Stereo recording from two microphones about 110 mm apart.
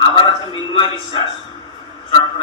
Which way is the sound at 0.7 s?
50° left (ahead or behind).